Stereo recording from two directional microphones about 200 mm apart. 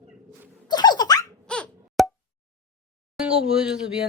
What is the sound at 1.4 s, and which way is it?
Plop, 5° left (ahead or behind).